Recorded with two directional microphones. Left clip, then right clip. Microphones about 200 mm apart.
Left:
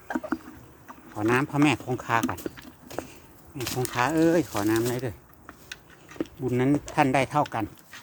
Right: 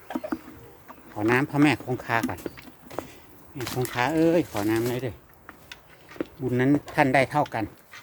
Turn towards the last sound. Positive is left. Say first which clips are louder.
# right 2 dB
turn(degrees=5)  # may be behind; listen again after turning